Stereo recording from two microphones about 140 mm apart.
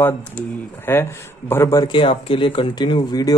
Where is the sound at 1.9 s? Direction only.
40° left (ahead or behind).